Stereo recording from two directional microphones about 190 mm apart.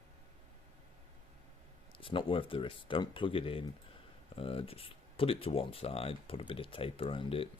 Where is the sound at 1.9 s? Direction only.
25° left (ahead or behind).